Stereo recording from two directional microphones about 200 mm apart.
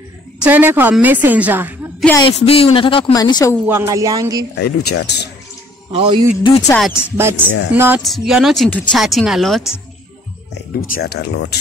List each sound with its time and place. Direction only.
0.4 s a woman's voice: 10° right (ahead or behind)
2.2 s speech: 30° left (ahead or behind)
3.6 s a woman's voice: 15° right (ahead or behind)
4.6 s speech: 55° left (ahead or behind)
5.9 s speech: 25° right (ahead or behind)
6.7 s speech: 10° left (ahead or behind)
7.2 s a woman's voice: 10° right (ahead or behind)
10.7 s speech: 50° left (ahead or behind)